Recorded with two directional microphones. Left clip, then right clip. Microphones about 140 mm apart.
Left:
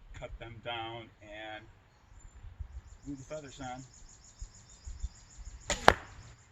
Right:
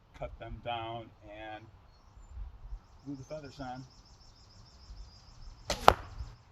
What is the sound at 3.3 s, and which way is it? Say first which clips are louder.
Speech: even; 25° right (ahead or behind).